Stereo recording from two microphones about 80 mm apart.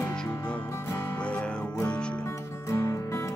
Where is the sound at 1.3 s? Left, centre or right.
Centre.